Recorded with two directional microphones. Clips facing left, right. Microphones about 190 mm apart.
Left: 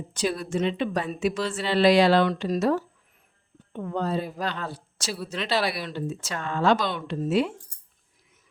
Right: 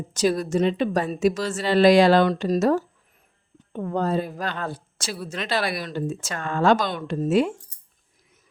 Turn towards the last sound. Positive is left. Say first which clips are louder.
# right 3 dB
turn(degrees=-45)  # may be behind; listen again after turning